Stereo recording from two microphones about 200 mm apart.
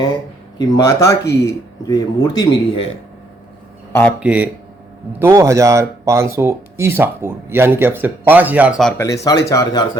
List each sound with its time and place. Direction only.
0.6 s speech: 20° left (ahead or behind)
4.2 s speech: 5° right (ahead or behind)
9.0 s speech: 15° left (ahead or behind)